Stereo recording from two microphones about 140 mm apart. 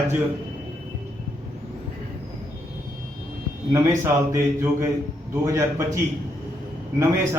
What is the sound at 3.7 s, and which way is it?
A man's voice, 15° right (ahead or behind).